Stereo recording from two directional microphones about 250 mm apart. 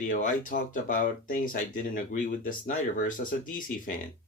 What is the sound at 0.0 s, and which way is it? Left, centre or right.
Speech, left.